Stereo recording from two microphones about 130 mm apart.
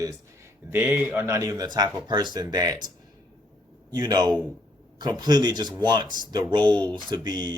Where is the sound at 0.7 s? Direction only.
15° right (ahead or behind); by 2.9 s 30° right (ahead or behind).